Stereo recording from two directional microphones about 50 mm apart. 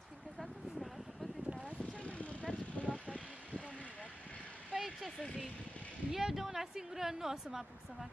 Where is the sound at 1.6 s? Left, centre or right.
Left.